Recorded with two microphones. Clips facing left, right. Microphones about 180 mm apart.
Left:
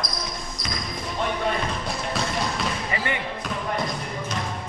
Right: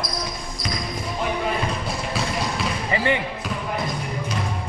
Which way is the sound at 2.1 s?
5° right (ahead or behind).